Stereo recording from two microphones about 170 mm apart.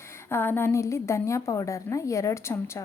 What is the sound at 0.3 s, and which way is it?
A woman's voice, 10° left (ahead or behind).